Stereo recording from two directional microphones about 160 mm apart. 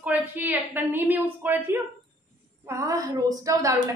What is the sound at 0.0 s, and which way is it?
A woman's voice, 10° right (ahead or behind).